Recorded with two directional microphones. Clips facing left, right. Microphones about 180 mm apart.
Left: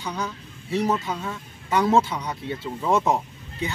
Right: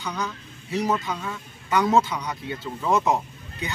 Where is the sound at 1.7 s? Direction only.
30° left (ahead or behind).